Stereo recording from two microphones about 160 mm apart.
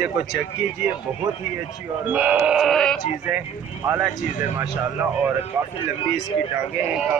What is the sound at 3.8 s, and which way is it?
Speech, 10° right (ahead or behind).